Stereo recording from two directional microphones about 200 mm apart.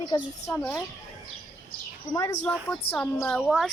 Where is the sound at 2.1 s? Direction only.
15° left (ahead or behind); by 3.7 s centre (ahead or behind).